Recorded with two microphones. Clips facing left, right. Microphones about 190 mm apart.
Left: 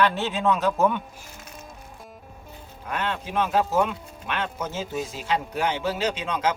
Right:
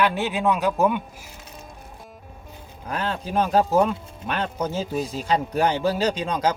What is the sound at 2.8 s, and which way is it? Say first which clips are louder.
Speech: right 2 dB; 35° right (ahead or behind).